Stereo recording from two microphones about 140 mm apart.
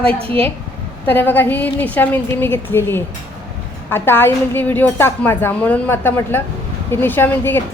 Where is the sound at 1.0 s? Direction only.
15° left (ahead or behind).